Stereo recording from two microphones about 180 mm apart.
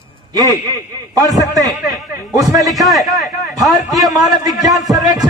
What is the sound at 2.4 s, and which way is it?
A man's voice, centre (ahead or behind).